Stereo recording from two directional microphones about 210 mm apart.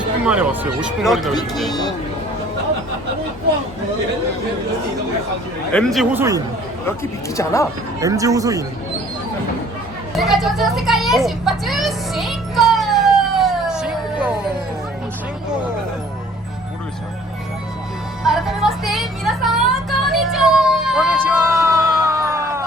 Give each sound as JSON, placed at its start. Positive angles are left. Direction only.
{"t": 0.3, "sound": "speech", "side_deg": -5}
{"t": 5.7, "sound": "speech", "side_deg": 0}
{"t": 6.1, "sound": "speech", "side_deg": -15}
{"t": 7.3, "sound": "speech", "side_deg": 15}
{"t": 8.0, "sound": "speech", "side_deg": -15}
{"t": 10.2, "sound": "children playing", "side_deg": 0}
{"t": 18.2, "sound": "music", "side_deg": 0}